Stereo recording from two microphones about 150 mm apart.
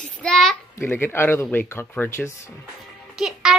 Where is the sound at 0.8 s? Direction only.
15° left (ahead or behind).